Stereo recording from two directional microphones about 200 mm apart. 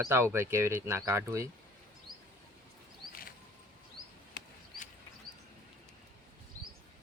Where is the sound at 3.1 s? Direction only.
45° left (ahead or behind).